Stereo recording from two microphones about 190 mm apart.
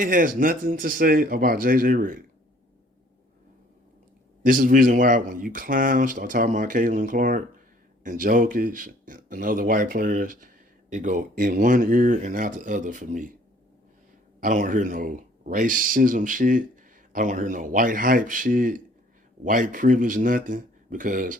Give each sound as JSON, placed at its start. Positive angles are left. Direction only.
{"t": 0.0, "sound": "speech", "side_deg": -45}
{"t": 4.4, "sound": "speech", "side_deg": -45}
{"t": 14.4, "sound": "speech", "side_deg": -45}